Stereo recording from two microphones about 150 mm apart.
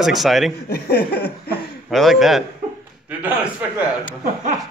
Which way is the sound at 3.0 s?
10° right (ahead or behind).